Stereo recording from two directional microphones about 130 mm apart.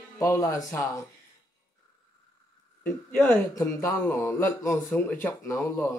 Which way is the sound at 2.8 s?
15° left (ahead or behind).